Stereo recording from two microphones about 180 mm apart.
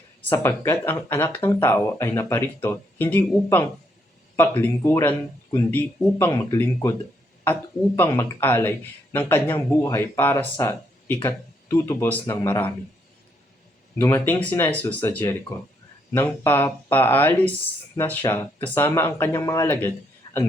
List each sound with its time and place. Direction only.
0.3 s speech: 10° left (ahead or behind)
7.9 s speech: 15° left (ahead or behind)
14.0 s speech: 10° left (ahead or behind)
20.2 s a sound: 25° left (ahead or behind)